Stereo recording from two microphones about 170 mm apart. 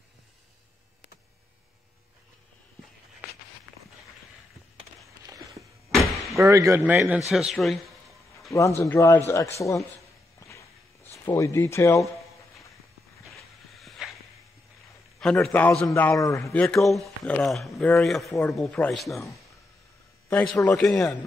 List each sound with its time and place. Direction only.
6.3 s a man's voice: 15° right (ahead or behind); by 7.8 s centre (ahead or behind)
8.5 s speech: 20° left (ahead or behind)
10.4 s walk: 15° left (ahead or behind)
11.2 s speech: 15° left (ahead or behind)
13.7 s a sound: centre (ahead or behind)
15.1 s speech: 5° left (ahead or behind); by 16.5 s 20° left (ahead or behind)
16.5 s speech: 5° left (ahead or behind)
20.2 s speech: 15° left (ahead or behind)
20.7 s speech: 5° left (ahead or behind)